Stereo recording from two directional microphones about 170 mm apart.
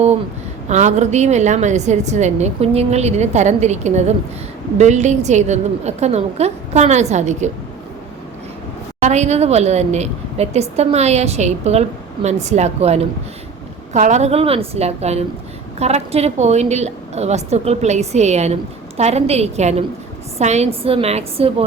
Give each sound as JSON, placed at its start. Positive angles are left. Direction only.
{"t": 0.7, "sound": "a woman's voice", "side_deg": -45}
{"t": 9.0, "sound": "a woman's voice", "side_deg": -40}